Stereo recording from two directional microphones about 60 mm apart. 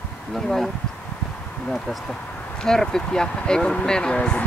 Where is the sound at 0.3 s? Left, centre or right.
Centre.